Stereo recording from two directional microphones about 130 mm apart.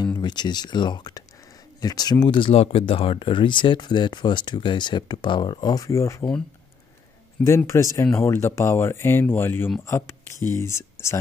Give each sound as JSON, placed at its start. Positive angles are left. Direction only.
{"t": 0.0, "sound": "speech", "side_deg": 35}
{"t": 7.4, "sound": "speech", "side_deg": 20}